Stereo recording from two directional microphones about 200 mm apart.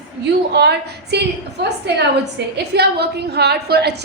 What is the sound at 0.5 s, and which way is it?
Speech, 55° right (ahead or behind).